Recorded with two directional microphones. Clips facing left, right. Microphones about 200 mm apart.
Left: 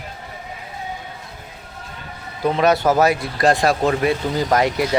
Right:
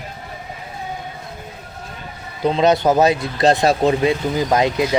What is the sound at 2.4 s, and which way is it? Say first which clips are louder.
Speech: right 1 dB; 20° right (ahead or behind).